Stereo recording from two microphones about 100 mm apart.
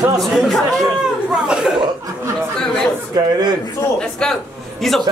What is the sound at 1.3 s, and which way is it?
Speech, 10° right (ahead or behind).